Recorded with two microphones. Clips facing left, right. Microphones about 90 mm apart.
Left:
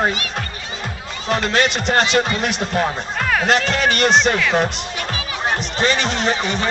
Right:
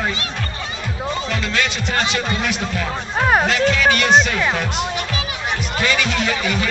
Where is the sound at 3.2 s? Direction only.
35° right (ahead or behind).